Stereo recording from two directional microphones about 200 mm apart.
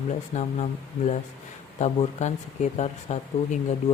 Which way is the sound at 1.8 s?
35° left (ahead or behind).